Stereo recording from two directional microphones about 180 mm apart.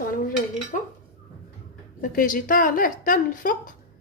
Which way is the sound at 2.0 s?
50° left (ahead or behind).